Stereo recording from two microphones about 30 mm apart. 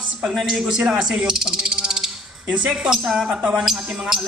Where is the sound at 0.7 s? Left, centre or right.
Right.